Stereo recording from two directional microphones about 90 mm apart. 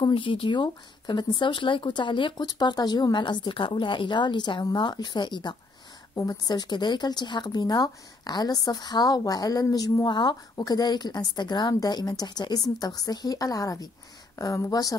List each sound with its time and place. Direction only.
0.1 s a woman's voice: 75° left (ahead or behind)
2.4 s a woman's voice: 50° left (ahead or behind)
10.0 s a woman's voice: 60° left (ahead or behind)
10.5 s speech: 45° left (ahead or behind)